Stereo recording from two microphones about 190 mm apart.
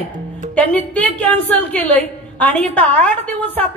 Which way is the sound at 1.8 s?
35° right (ahead or behind).